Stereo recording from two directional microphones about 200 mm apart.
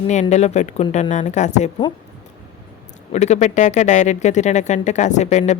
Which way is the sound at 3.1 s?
35° left (ahead or behind).